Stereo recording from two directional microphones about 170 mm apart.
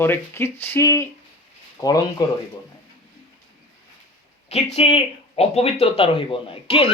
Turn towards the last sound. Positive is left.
turn(degrees=35)  # may be behind; listen again after turning